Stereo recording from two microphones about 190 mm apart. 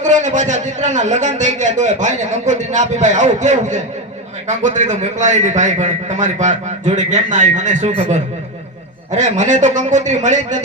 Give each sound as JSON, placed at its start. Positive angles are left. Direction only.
{"t": 0.0, "sound": "a man's voice", "side_deg": -40}